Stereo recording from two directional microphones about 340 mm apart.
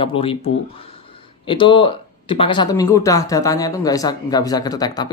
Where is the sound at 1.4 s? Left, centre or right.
Centre.